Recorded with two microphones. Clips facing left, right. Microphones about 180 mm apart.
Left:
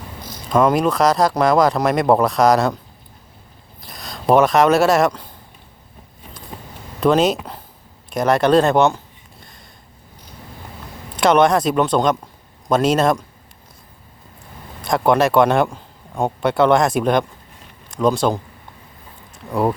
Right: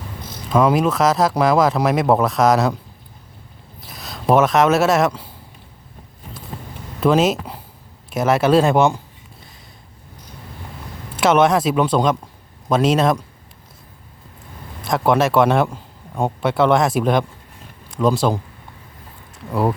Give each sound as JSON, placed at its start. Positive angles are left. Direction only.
{"t": 0.5, "sound": "speech", "side_deg": -5}
{"t": 3.8, "sound": "speech", "side_deg": -5}
{"t": 7.0, "sound": "speech", "side_deg": -5}
{"t": 11.2, "sound": "speech", "side_deg": -5}
{"t": 14.8, "sound": "a man's voice", "side_deg": 0}
{"t": 19.5, "sound": "speech", "side_deg": -5}